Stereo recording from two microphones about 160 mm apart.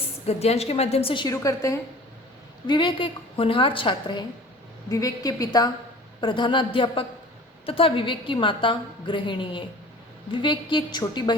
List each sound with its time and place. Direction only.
0.3 s a woman's voice: 40° left (ahead or behind)
1.3 s a woman's voice: 20° left (ahead or behind)
2.6 s a woman's voice: 30° left (ahead or behind)